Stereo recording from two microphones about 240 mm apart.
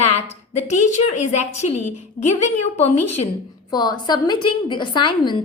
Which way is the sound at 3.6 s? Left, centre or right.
Centre.